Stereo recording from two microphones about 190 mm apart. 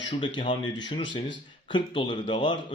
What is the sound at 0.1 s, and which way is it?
Speech, 25° left (ahead or behind).